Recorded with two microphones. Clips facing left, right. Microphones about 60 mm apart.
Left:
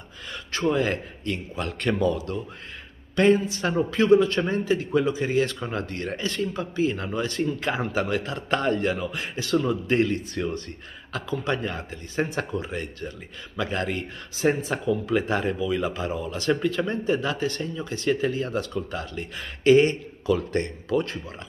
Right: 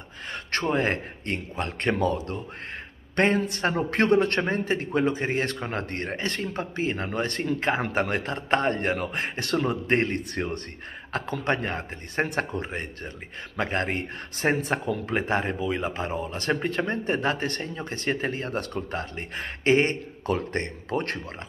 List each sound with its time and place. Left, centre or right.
0.3 s speech: right
3.2 s a man's voice: right